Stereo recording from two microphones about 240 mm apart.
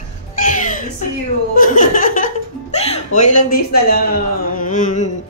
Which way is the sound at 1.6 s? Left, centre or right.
Left.